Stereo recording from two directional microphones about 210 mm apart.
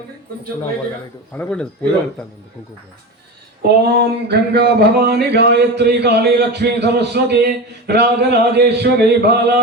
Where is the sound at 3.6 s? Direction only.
50° right (ahead or behind).